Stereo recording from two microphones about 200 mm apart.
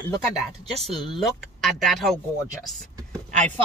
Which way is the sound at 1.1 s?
Centre (ahead or behind).